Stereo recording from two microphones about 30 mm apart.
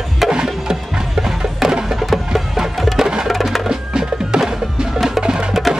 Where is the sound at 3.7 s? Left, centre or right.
Right.